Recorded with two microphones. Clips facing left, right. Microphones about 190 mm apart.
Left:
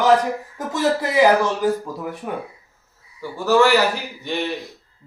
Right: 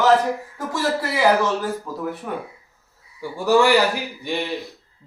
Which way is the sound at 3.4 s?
15° right (ahead or behind).